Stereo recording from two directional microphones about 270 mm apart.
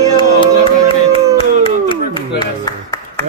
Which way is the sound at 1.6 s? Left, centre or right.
Centre.